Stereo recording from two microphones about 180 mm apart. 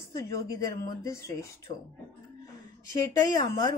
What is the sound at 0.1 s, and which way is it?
Speech, 20° left (ahead or behind).